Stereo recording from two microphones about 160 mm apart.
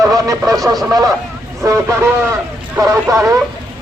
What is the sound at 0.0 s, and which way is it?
Speech, 20° right (ahead or behind).